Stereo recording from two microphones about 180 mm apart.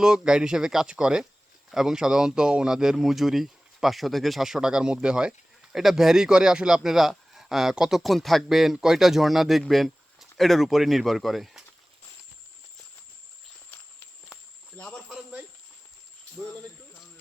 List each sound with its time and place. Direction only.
0.0 s speech: 5° right (ahead or behind)
14.8 s cricket: 5° left (ahead or behind)